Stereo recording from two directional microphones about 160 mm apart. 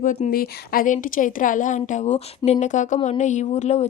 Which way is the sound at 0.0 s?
55° left (ahead or behind).